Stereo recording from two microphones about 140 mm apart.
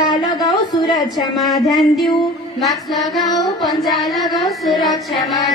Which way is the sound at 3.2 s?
30° left (ahead or behind).